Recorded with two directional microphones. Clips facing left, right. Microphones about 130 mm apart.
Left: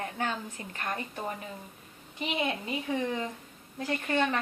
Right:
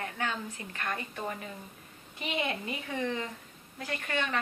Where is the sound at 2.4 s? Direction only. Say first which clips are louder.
Left 2 dB; 15° left (ahead or behind).